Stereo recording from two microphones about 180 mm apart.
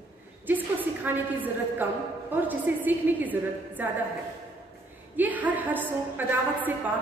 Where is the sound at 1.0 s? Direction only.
10° right (ahead or behind).